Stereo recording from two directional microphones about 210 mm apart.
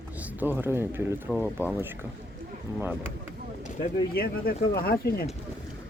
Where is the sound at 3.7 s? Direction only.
40° left (ahead or behind).